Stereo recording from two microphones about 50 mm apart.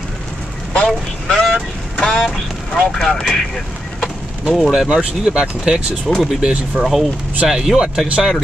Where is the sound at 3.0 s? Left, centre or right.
Centre.